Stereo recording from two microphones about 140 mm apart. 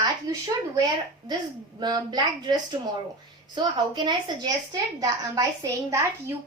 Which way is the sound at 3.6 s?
35° right (ahead or behind).